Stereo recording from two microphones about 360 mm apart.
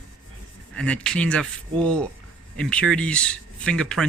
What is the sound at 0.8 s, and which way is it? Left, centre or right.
Speech, centre.